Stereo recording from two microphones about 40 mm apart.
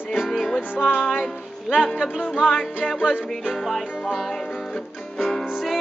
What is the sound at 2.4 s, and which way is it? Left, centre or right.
Music, left.